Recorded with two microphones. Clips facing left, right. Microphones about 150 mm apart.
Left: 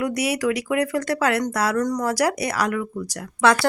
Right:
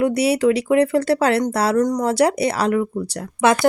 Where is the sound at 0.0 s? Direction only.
30° right (ahead or behind).